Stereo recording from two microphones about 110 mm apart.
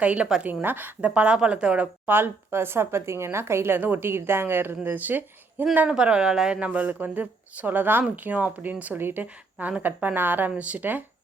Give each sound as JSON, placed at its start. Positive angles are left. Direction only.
{"t": 0.0, "sound": "speech", "side_deg": -10}
{"t": 0.6, "sound": "speech", "side_deg": -20}